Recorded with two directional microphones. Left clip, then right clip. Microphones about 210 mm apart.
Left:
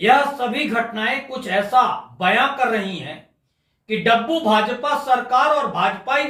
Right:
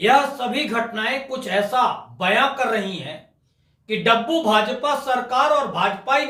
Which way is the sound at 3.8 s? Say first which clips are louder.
Left 1 dB; 15° right (ahead or behind).